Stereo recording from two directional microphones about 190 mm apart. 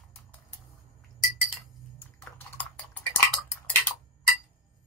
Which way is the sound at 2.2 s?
5° left (ahead or behind).